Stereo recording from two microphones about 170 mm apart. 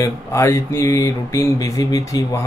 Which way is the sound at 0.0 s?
15° left (ahead or behind).